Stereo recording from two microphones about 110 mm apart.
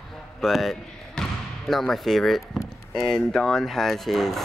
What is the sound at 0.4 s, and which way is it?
Speech, centre (ahead or behind).